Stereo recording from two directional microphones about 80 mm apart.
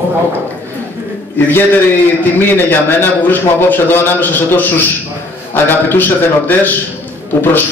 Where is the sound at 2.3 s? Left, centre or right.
Left.